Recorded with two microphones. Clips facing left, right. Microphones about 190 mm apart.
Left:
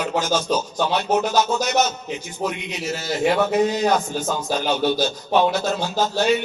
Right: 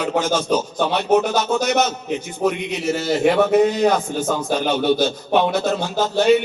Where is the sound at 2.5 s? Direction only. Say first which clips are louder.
Right 7 dB; 60° right (ahead or behind).